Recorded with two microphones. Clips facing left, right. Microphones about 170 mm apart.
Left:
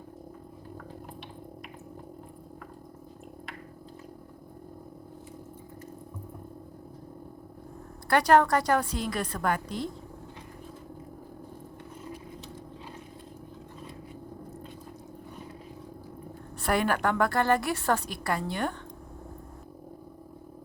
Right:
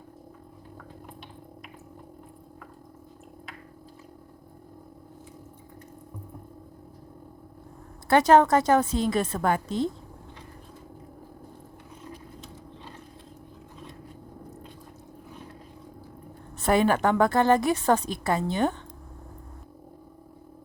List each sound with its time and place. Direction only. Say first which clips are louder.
8.1 s a woman's voice: right 3 dB; 20° right (ahead or behind)
16.6 s a woman's voice: right 5 dB; 20° right (ahead or behind)